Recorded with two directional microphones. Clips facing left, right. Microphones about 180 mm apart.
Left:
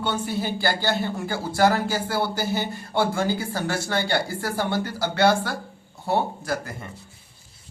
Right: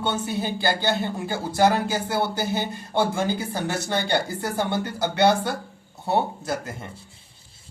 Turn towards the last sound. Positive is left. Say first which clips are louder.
# even
turn(degrees=-20)  # may be behind; listen again after turning